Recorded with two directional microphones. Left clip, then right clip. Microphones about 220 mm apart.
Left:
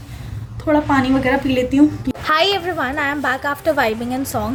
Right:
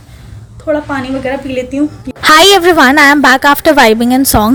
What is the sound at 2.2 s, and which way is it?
A woman's voice, 45° right (ahead or behind).